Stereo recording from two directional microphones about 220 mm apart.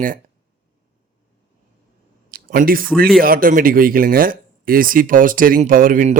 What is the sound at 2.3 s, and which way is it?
Speech, 40° right (ahead or behind).